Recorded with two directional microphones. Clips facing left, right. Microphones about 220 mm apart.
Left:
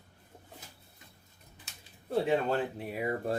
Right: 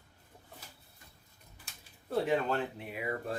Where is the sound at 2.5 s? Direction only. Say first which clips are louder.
Left 3 dB; 40° left (ahead or behind).